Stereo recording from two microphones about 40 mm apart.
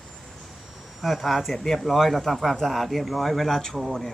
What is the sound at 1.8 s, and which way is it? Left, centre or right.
Speech, centre.